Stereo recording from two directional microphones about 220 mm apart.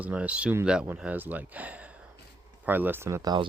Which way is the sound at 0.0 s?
5° right (ahead or behind).